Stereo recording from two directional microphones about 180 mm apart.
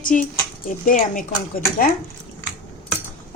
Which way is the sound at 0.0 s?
45° left (ahead or behind).